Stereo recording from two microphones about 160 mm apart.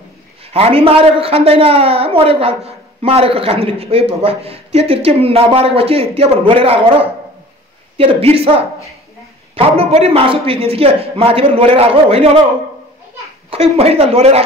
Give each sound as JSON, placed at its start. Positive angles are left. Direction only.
{"t": 0.5, "sound": "a woman's voice", "side_deg": -40}
{"t": 9.6, "sound": "a woman's voice", "side_deg": -40}
{"t": 13.7, "sound": "a woman's voice", "side_deg": -40}